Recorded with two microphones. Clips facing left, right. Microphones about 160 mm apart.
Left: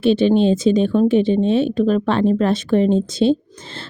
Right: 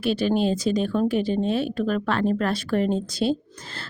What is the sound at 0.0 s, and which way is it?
A woman's voice, 25° left (ahead or behind).